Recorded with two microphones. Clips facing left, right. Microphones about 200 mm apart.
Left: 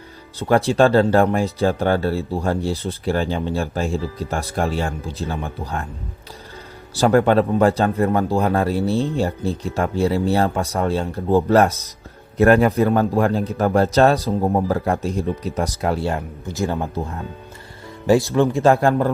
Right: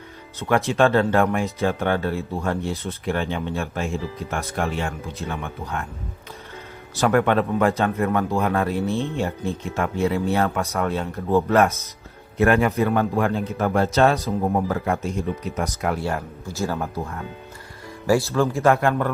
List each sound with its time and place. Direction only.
0.3 s a man's voice: 35° left (ahead or behind)
6.9 s a man's voice: 30° left (ahead or behind)
16.1 s speech: 20° left (ahead or behind)
18.6 s a man's voice: 30° left (ahead or behind)